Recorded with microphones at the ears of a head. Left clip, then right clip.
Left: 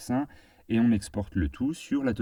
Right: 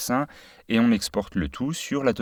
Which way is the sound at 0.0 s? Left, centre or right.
Right.